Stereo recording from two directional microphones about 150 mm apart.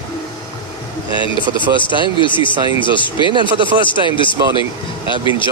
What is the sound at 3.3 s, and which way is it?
Speech, 35° right (ahead or behind).